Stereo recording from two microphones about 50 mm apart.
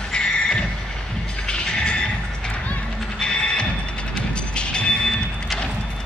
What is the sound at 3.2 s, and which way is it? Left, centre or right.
Music, centre.